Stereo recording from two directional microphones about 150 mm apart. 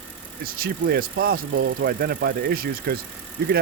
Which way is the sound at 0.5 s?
80° right.